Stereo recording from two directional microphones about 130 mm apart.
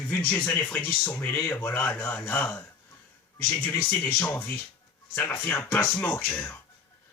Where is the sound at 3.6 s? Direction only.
10° left (ahead or behind).